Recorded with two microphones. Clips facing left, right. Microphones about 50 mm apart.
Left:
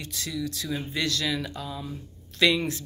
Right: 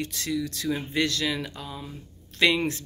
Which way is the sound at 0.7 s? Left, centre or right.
Right.